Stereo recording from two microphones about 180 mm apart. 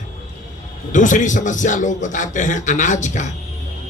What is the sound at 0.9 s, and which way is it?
A man's voice, 45° left (ahead or behind).